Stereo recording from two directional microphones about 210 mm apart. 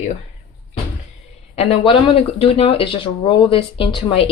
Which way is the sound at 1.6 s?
25° left (ahead or behind).